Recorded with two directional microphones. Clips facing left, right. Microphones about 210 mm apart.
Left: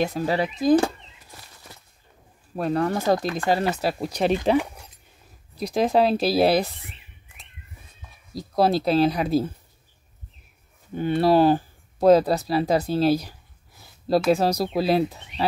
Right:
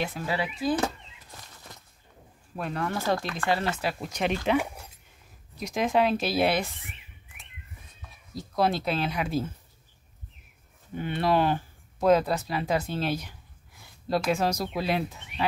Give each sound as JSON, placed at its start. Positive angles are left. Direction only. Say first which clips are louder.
{"t": 0.0, "sound": "speech", "louder": "left 7 dB", "side_deg": 40}
{"t": 2.5, "sound": "speech", "louder": "left 8 dB", "side_deg": 40}
{"t": 4.6, "sound": "a sound", "louder": "left 4 dB", "side_deg": -10}
{"t": 5.6, "sound": "speech", "louder": "left 5 dB", "side_deg": 35}
{"t": 8.4, "sound": "speech", "louder": "left 5 dB", "side_deg": 35}
{"t": 11.0, "sound": "speech", "louder": "left 7 dB", "side_deg": 35}